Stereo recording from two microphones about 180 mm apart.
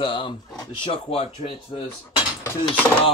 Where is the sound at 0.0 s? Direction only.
30° left (ahead or behind).